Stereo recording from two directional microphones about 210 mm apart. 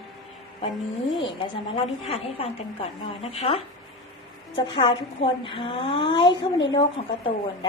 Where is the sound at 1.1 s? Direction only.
25° left (ahead or behind).